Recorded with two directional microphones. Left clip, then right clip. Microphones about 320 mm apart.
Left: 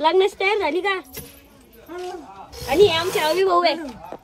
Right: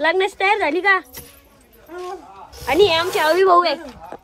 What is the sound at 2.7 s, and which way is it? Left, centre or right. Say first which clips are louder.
Speech: right 1 dB; right.